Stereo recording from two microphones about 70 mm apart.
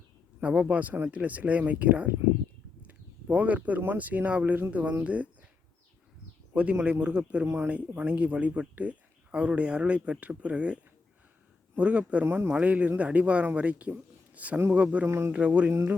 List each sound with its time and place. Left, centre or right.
0.4 s speech: centre
6.5 s speech: centre
11.8 s speech: centre
12.2 s speech: right
12.5 s speech: centre
15.0 s speech: right
15.3 s speech: centre
15.7 s speech: right